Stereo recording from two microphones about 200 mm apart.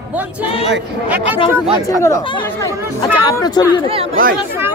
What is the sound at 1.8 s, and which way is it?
Speech, 15° left (ahead or behind).